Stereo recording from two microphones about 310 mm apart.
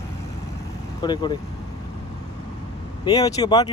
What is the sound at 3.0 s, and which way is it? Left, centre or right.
Speech, centre.